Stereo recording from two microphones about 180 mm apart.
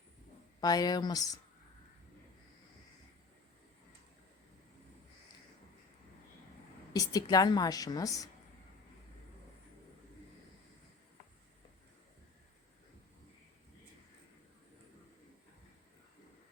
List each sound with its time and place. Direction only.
0.6 s a woman's voice: 20° left (ahead or behind)
6.9 s a woman's voice: 20° left (ahead or behind)